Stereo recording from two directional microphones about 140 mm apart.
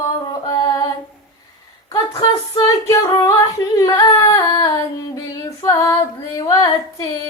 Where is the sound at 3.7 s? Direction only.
25° left (ahead or behind).